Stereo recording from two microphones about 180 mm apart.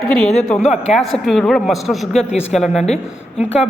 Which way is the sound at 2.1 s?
35° left (ahead or behind).